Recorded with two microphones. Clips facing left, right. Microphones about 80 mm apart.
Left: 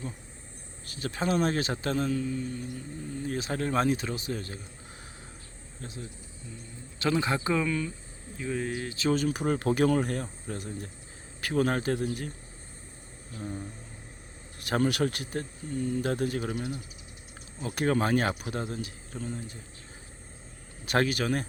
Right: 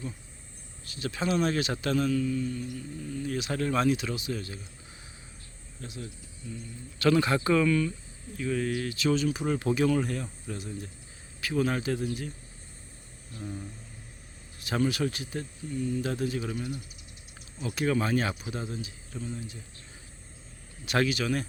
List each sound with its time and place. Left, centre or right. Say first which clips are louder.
0.9 s a man's voice: even; left
5.8 s a man's voice: right 1 dB; left
6.5 s a man's voice: right 5 dB; centre
9.1 s a man's voice: even; left
13.4 s a man's voice: left 2 dB; left
14.6 s speech: left 1 dB; left
20.8 s a man's voice: left 1 dB; left